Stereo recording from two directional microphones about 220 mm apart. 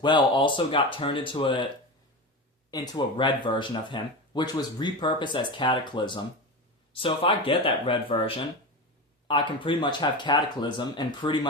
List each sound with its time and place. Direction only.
0.0 s speech: 20° left (ahead or behind)
2.6 s speech: 15° left (ahead or behind)